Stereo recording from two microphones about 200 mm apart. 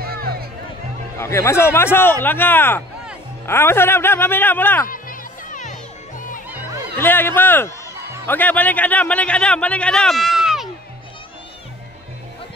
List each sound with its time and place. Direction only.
0.0 s music: 50° right (ahead or behind)
1.1 s a man's voice: 15° left (ahead or behind)
5.5 s crowd: 40° left (ahead or behind)
7.0 s a man's voice: 10° left (ahead or behind)